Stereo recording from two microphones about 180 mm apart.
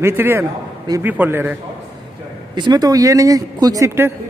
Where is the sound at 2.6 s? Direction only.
20° right (ahead or behind).